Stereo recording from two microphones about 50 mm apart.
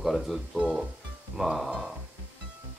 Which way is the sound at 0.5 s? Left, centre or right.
Right.